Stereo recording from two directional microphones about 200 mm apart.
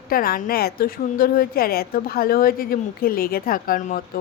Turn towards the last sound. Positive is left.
turn(degrees=45)  # may be behind; listen again after turning